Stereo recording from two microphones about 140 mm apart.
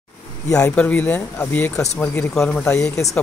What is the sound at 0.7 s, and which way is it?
Speech, 10° left (ahead or behind).